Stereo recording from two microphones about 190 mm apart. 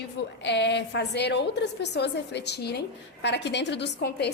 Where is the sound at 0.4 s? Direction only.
65° left (ahead or behind).